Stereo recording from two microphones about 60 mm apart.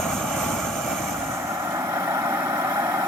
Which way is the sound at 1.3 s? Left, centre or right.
Right.